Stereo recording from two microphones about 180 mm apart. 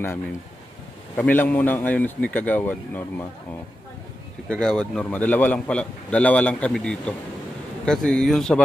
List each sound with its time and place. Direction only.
1.1 s a man's voice: 10° left (ahead or behind)
4.5 s a man's voice: 5° left (ahead or behind)